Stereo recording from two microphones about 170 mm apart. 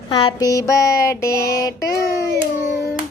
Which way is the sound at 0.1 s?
30° left (ahead or behind).